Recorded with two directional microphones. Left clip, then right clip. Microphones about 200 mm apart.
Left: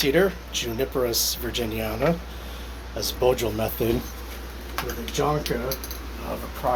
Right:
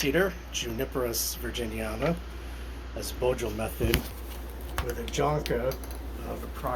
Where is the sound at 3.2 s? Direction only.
20° left (ahead or behind).